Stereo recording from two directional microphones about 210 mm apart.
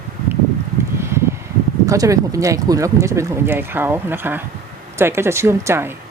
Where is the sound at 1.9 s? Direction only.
15° right (ahead or behind).